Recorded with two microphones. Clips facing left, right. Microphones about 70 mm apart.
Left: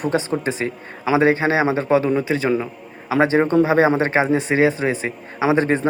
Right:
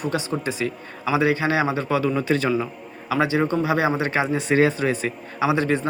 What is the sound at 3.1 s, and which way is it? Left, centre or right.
Speech, left.